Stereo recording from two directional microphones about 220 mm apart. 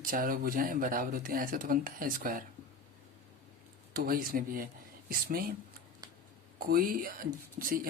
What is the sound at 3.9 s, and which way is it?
Speech, 40° right (ahead or behind).